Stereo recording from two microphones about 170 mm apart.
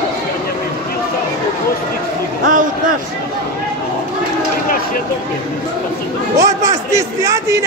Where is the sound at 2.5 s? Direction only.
50° right (ahead or behind).